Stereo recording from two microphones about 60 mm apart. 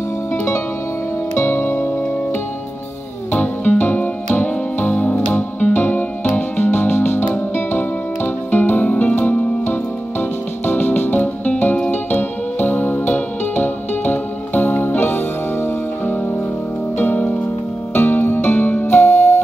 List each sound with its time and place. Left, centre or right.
1.4 s music: left
3.3 s music: left
17.0 s harp: left
17.9 s music: left